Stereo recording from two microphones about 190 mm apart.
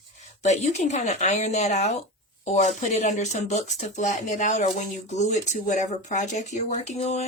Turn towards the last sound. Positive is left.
turn(degrees=35)  # may be behind; listen again after turning